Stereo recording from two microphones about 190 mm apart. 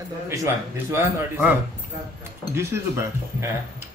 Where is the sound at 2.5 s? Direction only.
15° right (ahead or behind).